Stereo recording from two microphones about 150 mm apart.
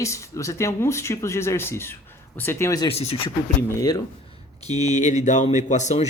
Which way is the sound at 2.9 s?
40° left (ahead or behind).